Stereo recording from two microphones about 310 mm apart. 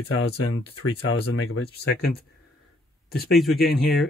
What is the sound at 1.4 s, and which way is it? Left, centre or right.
Speech, left.